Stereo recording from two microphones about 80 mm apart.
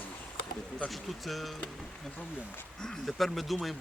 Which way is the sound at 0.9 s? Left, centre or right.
Centre.